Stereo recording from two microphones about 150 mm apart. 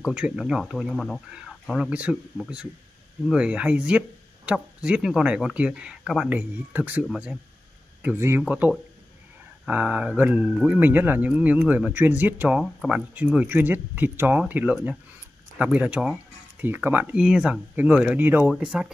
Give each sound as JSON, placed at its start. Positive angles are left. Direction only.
{"t": 0.0, "sound": "speech", "side_deg": -5}